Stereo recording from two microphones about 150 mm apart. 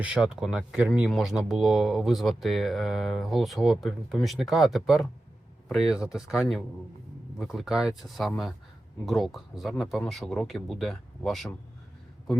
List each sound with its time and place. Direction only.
0.0 s speech: 5° right (ahead or behind)